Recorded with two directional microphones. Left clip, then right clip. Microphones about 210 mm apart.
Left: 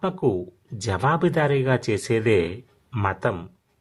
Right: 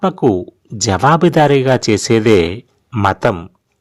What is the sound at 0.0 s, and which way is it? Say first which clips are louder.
Speech: right 9 dB; 35° right (ahead or behind).